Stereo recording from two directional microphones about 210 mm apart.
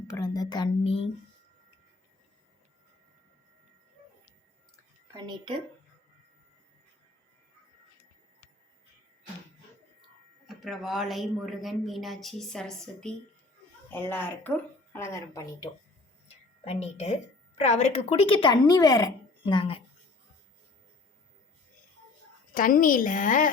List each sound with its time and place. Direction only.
0.1 s a woman's voice: 20° left (ahead or behind)
5.1 s a woman's voice: 20° right (ahead or behind)
10.4 s speech: centre (ahead or behind); by 15.7 s 15° left (ahead or behind)
16.6 s a woman's voice: 30° left (ahead or behind)
22.5 s a woman's voice: 40° left (ahead or behind)